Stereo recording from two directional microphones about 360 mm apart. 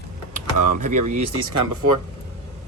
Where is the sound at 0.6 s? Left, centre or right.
Right.